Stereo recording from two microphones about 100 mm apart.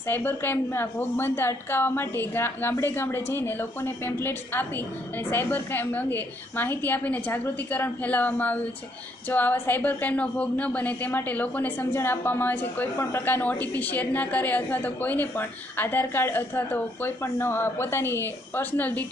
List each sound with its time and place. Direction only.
0.1 s a woman's voice: 20° left (ahead or behind)